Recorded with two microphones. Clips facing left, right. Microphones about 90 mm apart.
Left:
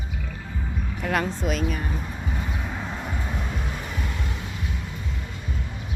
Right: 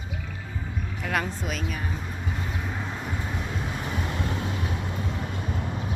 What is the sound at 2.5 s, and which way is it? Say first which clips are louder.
Vehicle: left 1 dB; centre (ahead or behind).